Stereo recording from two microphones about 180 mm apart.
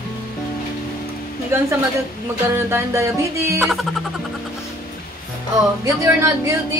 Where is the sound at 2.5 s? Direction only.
15° right (ahead or behind).